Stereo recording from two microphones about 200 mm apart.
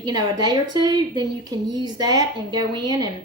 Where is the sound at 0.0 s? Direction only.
20° right (ahead or behind).